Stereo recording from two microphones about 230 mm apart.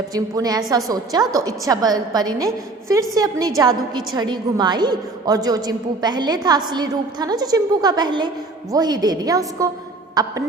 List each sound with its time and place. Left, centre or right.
0.1 s a woman's voice: centre